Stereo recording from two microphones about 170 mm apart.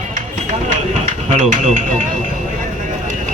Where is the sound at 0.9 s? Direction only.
40° right (ahead or behind).